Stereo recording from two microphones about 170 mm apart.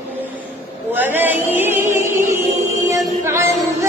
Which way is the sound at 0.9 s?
10° right (ahead or behind).